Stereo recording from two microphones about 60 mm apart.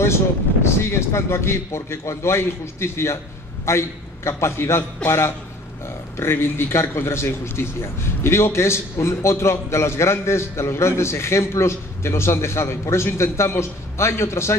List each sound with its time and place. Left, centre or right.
0.7 s a man's voice: left